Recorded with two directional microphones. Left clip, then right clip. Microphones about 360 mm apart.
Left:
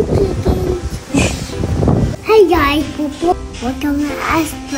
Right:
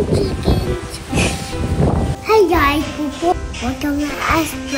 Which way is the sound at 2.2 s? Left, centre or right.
Centre.